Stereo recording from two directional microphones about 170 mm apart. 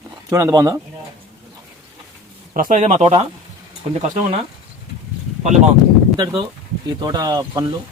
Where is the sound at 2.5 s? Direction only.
50° right (ahead or behind).